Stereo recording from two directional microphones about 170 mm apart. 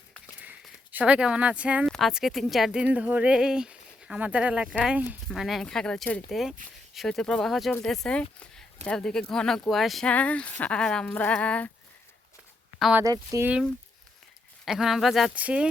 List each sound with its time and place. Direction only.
0.3 s a sound: 10° right (ahead or behind)
1.9 s speech: centre (ahead or behind)
12.8 s speech: 10° right (ahead or behind)
13.1 s speech: 20° right (ahead or behind)
14.6 s speech: centre (ahead or behind)